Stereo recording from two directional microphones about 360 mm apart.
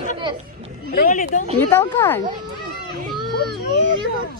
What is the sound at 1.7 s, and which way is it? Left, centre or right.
Speech, centre.